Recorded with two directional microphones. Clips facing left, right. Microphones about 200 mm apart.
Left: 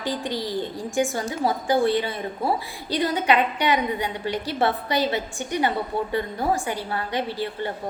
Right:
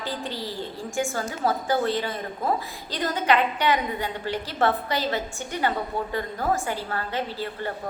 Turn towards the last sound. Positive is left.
turn(degrees=15)  # may be behind; listen again after turning